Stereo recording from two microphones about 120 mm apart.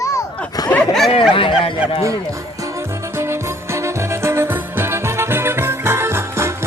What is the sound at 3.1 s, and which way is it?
Music, 20° right (ahead or behind).